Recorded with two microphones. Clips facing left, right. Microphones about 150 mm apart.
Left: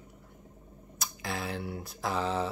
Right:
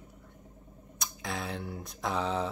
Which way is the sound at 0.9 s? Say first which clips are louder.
Left 1 dB; centre (ahead or behind).